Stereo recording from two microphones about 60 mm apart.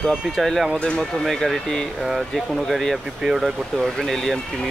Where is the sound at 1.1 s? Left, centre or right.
Centre.